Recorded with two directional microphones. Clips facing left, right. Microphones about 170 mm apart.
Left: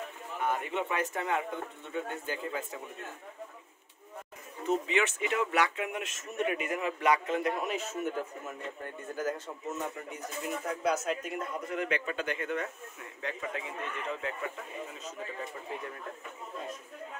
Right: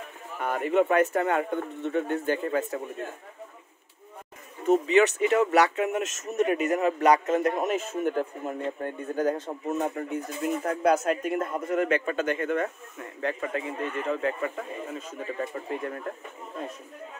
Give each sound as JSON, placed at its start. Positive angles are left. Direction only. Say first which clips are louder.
{"t": 0.4, "sound": "speech", "louder": "right 8 dB", "side_deg": -55}
{"t": 4.6, "sound": "speech", "louder": "right 9 dB", "side_deg": -40}